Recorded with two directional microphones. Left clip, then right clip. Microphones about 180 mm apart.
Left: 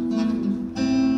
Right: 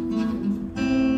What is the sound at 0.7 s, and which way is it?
Guitar, 35° left (ahead or behind).